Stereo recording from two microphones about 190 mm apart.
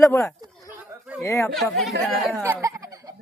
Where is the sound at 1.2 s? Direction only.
15° left (ahead or behind).